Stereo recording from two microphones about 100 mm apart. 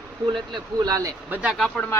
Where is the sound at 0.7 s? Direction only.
35° right (ahead or behind).